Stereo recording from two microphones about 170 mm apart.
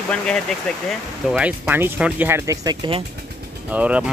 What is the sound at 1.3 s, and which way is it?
Speech, 10° right (ahead or behind).